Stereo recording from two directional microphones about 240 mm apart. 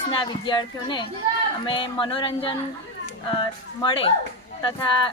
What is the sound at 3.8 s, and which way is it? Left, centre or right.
Speech, left.